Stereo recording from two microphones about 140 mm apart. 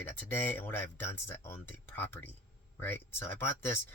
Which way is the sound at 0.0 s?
15° left (ahead or behind).